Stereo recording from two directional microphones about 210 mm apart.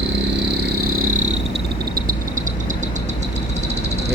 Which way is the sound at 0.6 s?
45° right (ahead or behind).